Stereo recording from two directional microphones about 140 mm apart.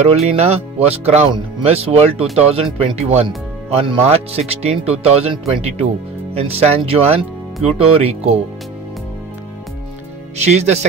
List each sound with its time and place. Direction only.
0.0 s speech: 50° right (ahead or behind)
3.3 s speech: 35° right (ahead or behind)
6.4 s speech: 45° right (ahead or behind)
10.3 s speech: 50° right (ahead or behind)